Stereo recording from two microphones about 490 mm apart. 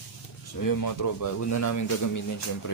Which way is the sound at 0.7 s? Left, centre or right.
Left.